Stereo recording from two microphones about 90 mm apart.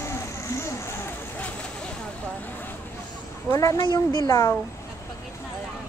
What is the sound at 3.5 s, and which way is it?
A woman's voice, 35° left (ahead or behind).